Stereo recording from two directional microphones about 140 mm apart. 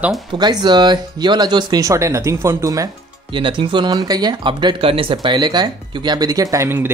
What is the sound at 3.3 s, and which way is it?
Speech, 35° right (ahead or behind).